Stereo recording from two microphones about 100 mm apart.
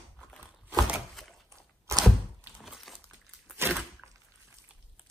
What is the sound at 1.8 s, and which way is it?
Thunk, 30° right (ahead or behind).